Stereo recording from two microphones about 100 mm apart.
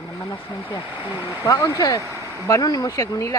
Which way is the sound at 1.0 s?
25° right (ahead or behind).